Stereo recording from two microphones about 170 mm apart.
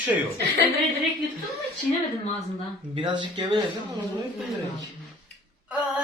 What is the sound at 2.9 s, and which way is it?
Speech, 25° right (ahead or behind).